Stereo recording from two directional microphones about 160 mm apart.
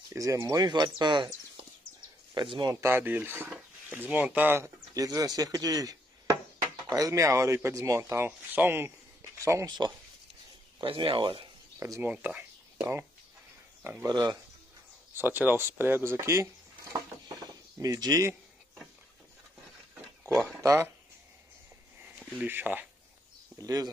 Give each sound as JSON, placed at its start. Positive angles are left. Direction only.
{"t": 0.1, "sound": "speech", "side_deg": -20}
{"t": 2.7, "sound": "speech", "side_deg": -15}
{"t": 11.8, "sound": "speech", "side_deg": -15}
{"t": 14.0, "sound": "speech", "side_deg": -25}
{"t": 15.1, "sound": "speech", "side_deg": -10}
{"t": 17.4, "sound": "a sound", "side_deg": -25}
{"t": 20.2, "sound": "speech", "side_deg": 0}
{"t": 20.6, "sound": "speech", "side_deg": -15}
{"t": 22.4, "sound": "speech", "side_deg": -10}
{"t": 23.6, "sound": "speech", "side_deg": -25}